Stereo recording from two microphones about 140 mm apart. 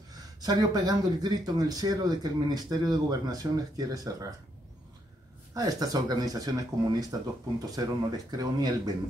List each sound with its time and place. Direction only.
0.1 s speech: 30° right (ahead or behind)
5.5 s speech: 25° right (ahead or behind)